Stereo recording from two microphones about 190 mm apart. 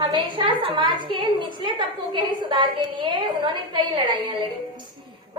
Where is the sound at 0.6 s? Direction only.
25° right (ahead or behind).